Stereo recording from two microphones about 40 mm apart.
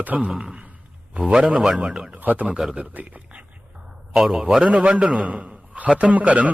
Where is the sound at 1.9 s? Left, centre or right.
Right.